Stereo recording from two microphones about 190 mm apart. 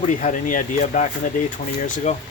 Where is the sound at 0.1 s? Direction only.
40° left (ahead or behind).